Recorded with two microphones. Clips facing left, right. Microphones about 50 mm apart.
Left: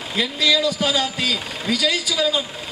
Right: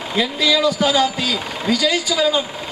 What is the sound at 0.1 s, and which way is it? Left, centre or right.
A man's voice, centre.